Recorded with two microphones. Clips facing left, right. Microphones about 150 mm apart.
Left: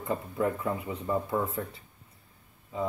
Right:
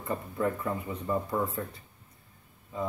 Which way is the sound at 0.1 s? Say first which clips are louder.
Left 1 dB; 15° left (ahead or behind).